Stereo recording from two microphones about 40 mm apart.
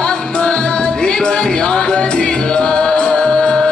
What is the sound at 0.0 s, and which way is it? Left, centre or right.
Music, left.